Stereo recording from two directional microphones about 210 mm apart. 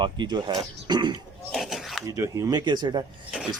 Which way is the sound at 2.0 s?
15° right (ahead or behind).